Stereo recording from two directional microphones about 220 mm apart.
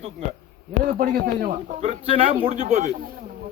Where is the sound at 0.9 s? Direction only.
40° right (ahead or behind).